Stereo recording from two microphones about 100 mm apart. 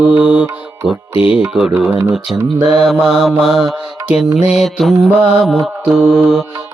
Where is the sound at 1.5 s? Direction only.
5° right (ahead or behind).